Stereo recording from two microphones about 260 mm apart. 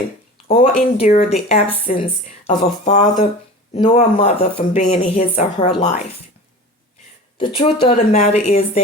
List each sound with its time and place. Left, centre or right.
0.4 s speech: left
7.3 s speech: left